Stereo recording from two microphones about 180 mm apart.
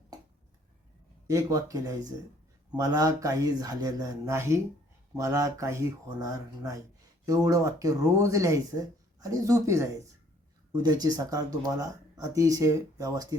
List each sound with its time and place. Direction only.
1.3 s speech: 20° right (ahead or behind)
10.8 s speech: 20° right (ahead or behind)